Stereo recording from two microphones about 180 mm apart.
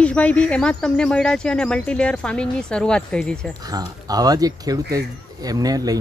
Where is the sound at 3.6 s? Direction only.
20° right (ahead or behind).